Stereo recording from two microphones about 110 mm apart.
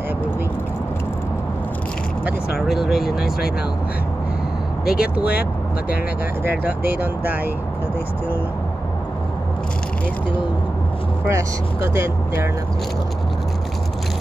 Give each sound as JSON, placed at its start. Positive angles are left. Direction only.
{"t": 2.7, "sound": "speech", "side_deg": 0}
{"t": 4.8, "sound": "speech", "side_deg": -10}
{"t": 6.4, "sound": "speech", "side_deg": -15}
{"t": 11.2, "sound": "speech", "side_deg": -25}